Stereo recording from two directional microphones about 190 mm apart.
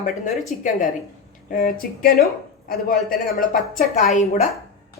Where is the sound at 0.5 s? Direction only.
40° left (ahead or behind).